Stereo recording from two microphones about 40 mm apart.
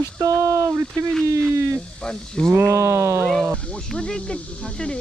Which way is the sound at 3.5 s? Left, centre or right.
Left.